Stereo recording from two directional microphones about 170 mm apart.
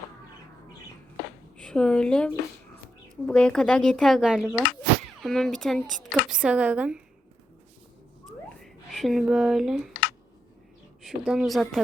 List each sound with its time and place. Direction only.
1.5 s a woman's voice: 5° left (ahead or behind)
8.6 s a woman's voice: centre (ahead or behind)
9.9 s a sound: 90° left
11.0 s a woman's voice: centre (ahead or behind)